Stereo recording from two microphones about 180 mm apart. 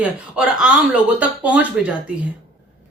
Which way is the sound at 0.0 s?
5° right (ahead or behind).